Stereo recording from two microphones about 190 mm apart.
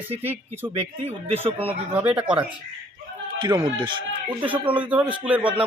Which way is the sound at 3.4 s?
25° right (ahead or behind).